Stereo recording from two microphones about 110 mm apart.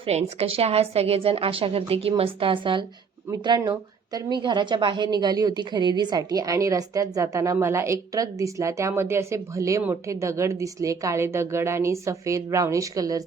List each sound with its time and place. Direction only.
0.0 s a woman's voice: 70° right (ahead or behind); by 2.8 s 50° right (ahead or behind)
3.4 s a woman's voice: 40° right (ahead or behind)